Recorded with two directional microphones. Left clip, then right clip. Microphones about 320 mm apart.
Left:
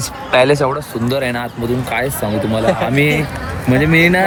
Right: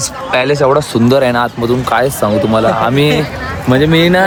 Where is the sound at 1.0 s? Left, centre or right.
Centre.